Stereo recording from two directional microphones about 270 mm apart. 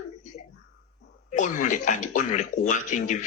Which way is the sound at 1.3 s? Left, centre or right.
Left.